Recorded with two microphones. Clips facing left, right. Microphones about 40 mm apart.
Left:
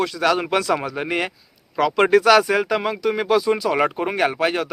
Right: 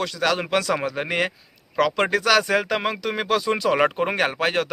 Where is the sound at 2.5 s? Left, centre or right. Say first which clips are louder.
Left 2 dB; centre.